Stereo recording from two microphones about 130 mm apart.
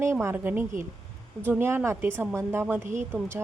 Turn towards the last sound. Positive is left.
turn(degrees=-15)  # may be behind; listen again after turning